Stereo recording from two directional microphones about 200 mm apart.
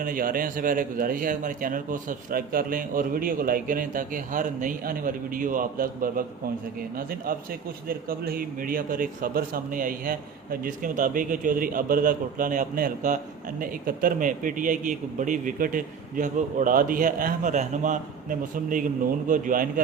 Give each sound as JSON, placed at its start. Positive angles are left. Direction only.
{"t": 0.0, "sound": "a man's voice", "side_deg": -45}